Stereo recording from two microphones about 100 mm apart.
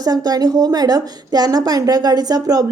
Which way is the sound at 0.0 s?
40° right (ahead or behind).